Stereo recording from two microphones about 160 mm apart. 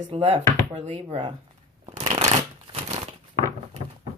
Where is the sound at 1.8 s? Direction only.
40° right (ahead or behind).